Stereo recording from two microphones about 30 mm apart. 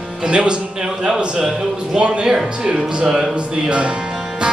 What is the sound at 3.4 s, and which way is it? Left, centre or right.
Speech, right.